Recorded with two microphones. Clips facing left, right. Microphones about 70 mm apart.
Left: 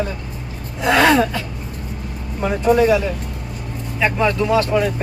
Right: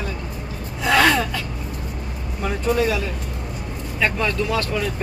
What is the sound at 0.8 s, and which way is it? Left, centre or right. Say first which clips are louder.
Speech: left 3 dB; left.